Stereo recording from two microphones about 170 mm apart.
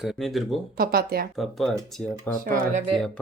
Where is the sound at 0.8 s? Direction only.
60° right (ahead or behind).